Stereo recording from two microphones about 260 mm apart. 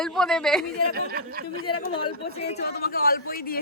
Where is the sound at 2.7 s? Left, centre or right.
Left.